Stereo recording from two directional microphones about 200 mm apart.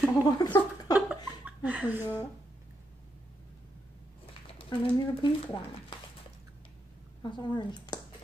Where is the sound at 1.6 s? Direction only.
5° right (ahead or behind).